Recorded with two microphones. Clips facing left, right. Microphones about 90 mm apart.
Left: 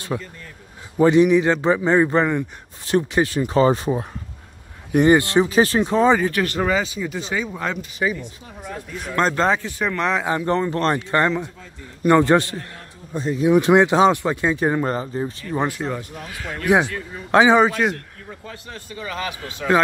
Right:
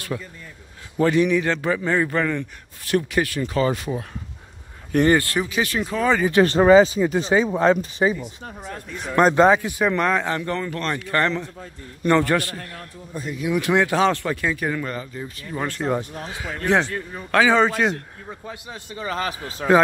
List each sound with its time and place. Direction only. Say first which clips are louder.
0.1 s a man's voice: left 5 dB; 20° left (ahead or behind)
4.9 s a man's voice: left 3 dB; 15° left (ahead or behind)
5.5 s a man's voice: left 6 dB; 35° left (ahead or behind)
6.3 s speech: right 8 dB; 30° right (ahead or behind)
9.1 s speech: right 4 dB; 10° right (ahead or behind)
10.4 s a man's voice: left 6 dB; 25° left (ahead or behind)
16.2 s speech: right 2 dB; 25° right (ahead or behind)
16.4 s a man's voice: left 2 dB; 10° left (ahead or behind)
17.6 s a man's voice: left 1 dB; 5° left (ahead or behind)
18.4 s speech: right 1 dB; 15° right (ahead or behind)
18.9 s speech: right 2 dB; 35° right (ahead or behind)